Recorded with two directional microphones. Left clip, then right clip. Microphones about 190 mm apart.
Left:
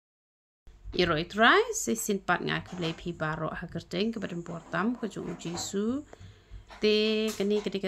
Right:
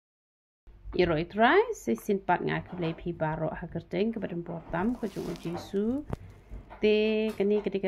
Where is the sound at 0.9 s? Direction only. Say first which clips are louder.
Even; 20° left (ahead or behind).